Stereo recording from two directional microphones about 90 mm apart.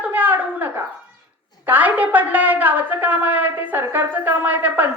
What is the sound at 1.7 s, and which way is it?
A woman's voice, 20° right (ahead or behind).